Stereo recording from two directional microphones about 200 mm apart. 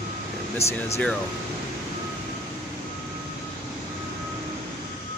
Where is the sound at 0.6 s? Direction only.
30° left (ahead or behind).